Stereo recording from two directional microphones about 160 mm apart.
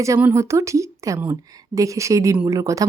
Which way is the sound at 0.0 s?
15° right (ahead or behind).